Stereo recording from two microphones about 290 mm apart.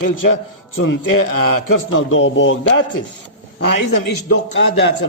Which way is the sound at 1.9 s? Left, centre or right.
Left.